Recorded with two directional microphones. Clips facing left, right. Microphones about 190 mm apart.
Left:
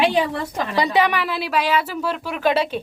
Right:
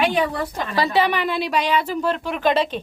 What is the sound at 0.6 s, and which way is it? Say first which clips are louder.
A child's voice: left 1 dB; 20° left (ahead or behind).